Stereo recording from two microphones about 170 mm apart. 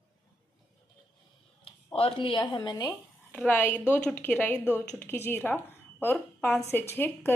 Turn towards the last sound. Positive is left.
turn(degrees=15)  # may be behind; listen again after turning